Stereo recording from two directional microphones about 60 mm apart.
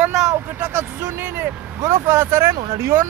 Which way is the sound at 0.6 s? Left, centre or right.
Right.